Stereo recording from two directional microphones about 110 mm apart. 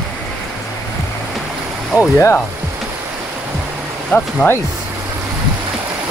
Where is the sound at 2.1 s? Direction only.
25° left (ahead or behind).